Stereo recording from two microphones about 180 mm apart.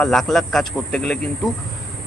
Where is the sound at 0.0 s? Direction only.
Centre (ahead or behind).